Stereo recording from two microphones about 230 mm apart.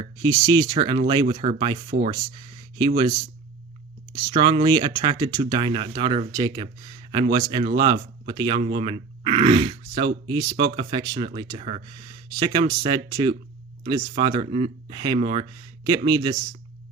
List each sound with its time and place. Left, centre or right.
0.0 s speech: centre